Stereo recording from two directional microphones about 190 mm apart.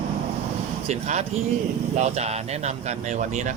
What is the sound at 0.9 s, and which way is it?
Speech, 35° right (ahead or behind).